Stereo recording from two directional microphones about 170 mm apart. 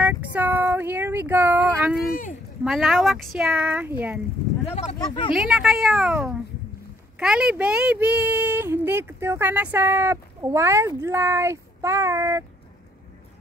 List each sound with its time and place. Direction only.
0.0 s a sound: 10° right (ahead or behind)
2.6 s speech: centre (ahead or behind)
4.6 s speech: 40° left (ahead or behind)
4.9 s speech: 25° left (ahead or behind)
5.3 s speech: 5° right (ahead or behind)